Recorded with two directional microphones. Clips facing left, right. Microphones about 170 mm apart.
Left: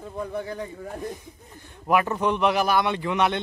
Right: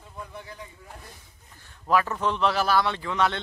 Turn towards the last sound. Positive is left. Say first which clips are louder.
# left 3 dB
turn(degrees=20)  # may be behind; listen again after turning